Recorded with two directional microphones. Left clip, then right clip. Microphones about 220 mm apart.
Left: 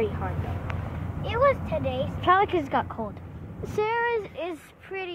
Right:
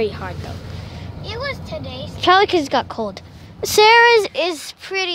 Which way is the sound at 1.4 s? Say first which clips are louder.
Left 5 dB; 15° right (ahead or behind).